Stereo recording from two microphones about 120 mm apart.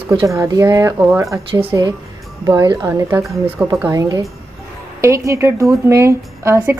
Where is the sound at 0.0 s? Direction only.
45° right (ahead or behind).